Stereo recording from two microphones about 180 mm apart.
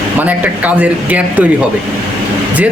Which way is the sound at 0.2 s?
10° right (ahead or behind).